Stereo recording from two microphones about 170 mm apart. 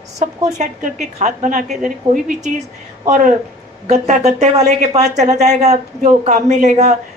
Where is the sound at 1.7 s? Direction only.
5° right (ahead or behind).